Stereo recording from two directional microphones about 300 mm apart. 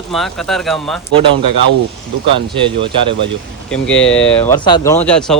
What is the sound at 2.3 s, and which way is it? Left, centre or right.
Speech, centre.